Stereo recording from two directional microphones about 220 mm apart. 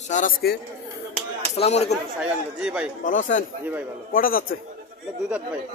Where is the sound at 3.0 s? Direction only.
35° left (ahead or behind).